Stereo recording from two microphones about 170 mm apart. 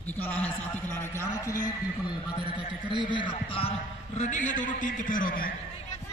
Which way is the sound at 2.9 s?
30° right (ahead or behind).